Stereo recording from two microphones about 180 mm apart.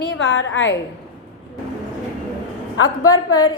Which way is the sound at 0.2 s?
80° left.